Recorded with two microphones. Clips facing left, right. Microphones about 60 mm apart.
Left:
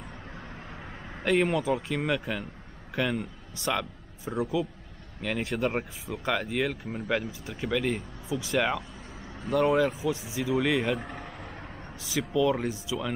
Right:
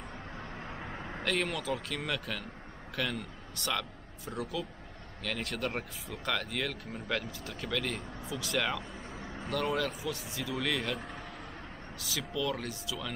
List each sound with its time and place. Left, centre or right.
0.7 s vehicle: centre
1.2 s a man's voice: left
11.0 s a sound: centre
12.2 s speech: centre